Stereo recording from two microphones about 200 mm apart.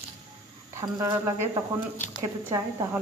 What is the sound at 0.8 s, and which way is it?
A woman's voice, 15° right (ahead or behind).